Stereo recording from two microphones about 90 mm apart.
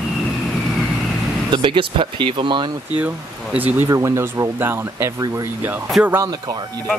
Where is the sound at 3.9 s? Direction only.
35° right (ahead or behind).